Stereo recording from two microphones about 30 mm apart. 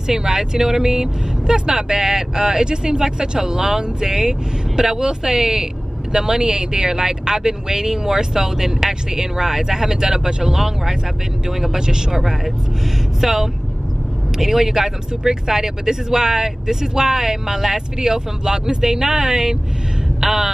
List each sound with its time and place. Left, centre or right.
0.0 s speech: centre
13.2 s speech: centre